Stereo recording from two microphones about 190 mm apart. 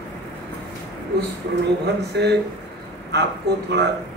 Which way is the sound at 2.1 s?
65° right (ahead or behind).